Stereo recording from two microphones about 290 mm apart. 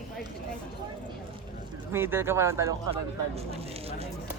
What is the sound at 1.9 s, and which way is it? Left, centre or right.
Speech, centre.